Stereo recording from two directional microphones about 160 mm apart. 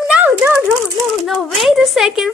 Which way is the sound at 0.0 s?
10° right (ahead or behind).